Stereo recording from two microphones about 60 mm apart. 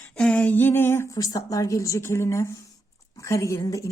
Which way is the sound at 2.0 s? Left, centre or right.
Left.